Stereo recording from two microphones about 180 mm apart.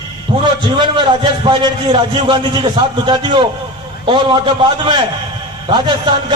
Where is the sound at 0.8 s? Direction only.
25° right (ahead or behind).